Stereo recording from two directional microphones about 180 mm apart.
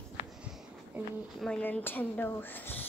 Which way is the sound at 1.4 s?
5° left (ahead or behind).